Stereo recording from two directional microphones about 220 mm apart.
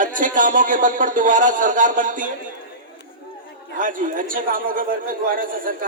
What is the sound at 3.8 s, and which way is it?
A man's voice, 40° right (ahead or behind).